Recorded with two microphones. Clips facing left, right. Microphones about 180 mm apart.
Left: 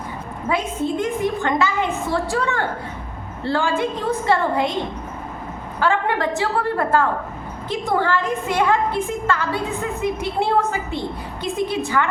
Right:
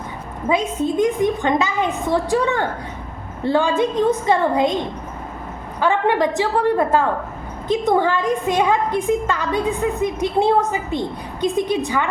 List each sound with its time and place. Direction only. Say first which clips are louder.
0.4 s a woman's voice: right 3 dB; 15° right (ahead or behind)
5.8 s a woman's voice: right 3 dB; 20° right (ahead or behind)